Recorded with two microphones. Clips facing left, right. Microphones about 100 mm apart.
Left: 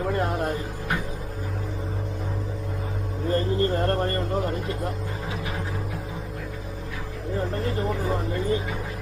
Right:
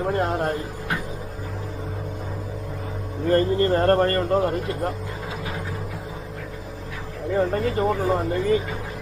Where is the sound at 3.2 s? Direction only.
50° right (ahead or behind).